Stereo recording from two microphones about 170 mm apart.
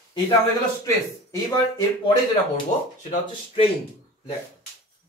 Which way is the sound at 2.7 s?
45° left (ahead or behind).